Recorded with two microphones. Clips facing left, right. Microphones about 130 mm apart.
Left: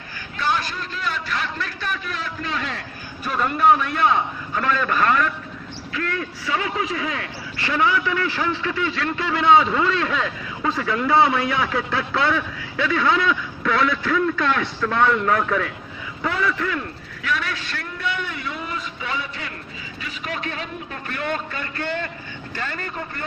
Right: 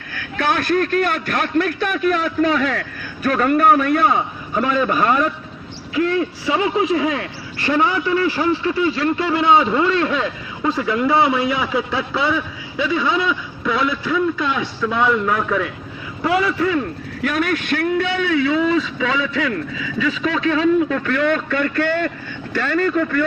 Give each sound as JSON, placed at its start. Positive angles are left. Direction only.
{"t": 0.1, "sound": "a man's voice", "side_deg": -60}
{"t": 3.2, "sound": "a man's voice", "side_deg": -70}
{"t": 3.8, "sound": "a man's voice", "side_deg": -5}
{"t": 8.8, "sound": "a man's voice", "side_deg": -10}
{"t": 17.2, "sound": "a man's voice", "side_deg": -50}